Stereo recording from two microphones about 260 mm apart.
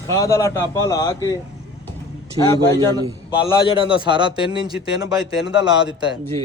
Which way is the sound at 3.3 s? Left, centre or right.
Centre.